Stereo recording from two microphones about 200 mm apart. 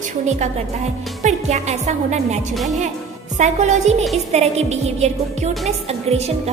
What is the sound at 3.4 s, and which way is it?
Speech, 35° right (ahead or behind).